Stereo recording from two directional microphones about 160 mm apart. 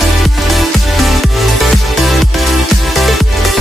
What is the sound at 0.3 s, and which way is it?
Music, centre (ahead or behind).